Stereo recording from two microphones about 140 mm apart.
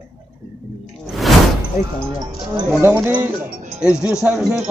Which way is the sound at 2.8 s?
15° right (ahead or behind).